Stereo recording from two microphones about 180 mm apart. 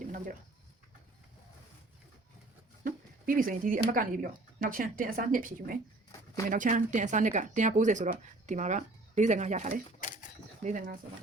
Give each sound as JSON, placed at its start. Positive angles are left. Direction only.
{"t": 2.8, "sound": "speech", "side_deg": -50}